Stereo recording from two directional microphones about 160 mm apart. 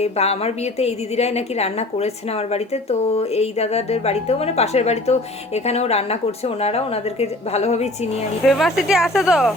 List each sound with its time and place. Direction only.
0.0 s a woman's voice: 40° left (ahead or behind)
3.1 s a woman's voice: 40° left (ahead or behind)
8.4 s speech: centre (ahead or behind)